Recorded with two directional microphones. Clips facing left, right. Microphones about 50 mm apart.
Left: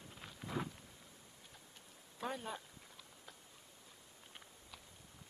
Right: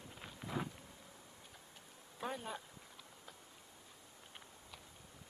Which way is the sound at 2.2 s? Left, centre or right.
Centre.